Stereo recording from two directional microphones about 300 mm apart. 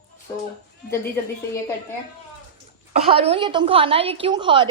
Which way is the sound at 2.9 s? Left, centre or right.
Centre.